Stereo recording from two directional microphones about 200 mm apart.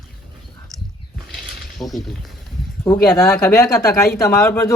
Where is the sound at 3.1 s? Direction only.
10° left (ahead or behind).